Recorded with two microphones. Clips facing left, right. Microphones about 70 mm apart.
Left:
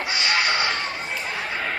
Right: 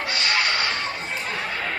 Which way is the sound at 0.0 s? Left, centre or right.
Centre.